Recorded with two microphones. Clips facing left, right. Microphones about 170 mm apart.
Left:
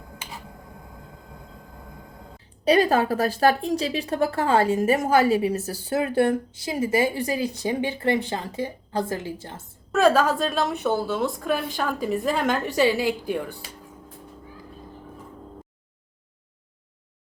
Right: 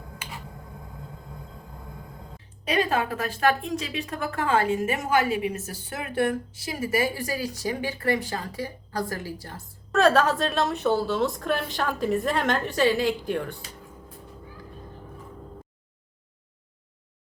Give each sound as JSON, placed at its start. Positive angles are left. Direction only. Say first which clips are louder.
{"t": 2.6, "sound": "a woman's voice", "louder": "left 6 dB", "side_deg": 35}
{"t": 9.9, "sound": "a woman's voice", "louder": "left 1 dB", "side_deg": 5}